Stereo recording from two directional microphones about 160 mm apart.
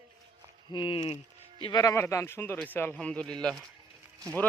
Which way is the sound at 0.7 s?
30° left (ahead or behind).